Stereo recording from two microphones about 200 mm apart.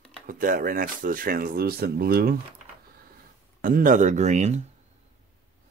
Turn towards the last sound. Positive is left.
turn(degrees=-35)  # may be behind; listen again after turning